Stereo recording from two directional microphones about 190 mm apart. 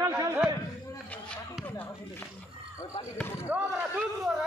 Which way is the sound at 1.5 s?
15° left (ahead or behind).